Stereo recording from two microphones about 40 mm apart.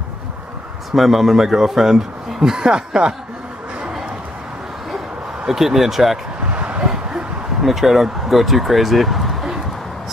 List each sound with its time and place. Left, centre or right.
0.9 s a man's voice: centre
5.4 s a man's voice: centre
6.5 s a sound: right
7.6 s speech: centre